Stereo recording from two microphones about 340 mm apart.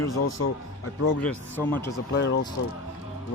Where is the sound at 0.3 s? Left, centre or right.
Left.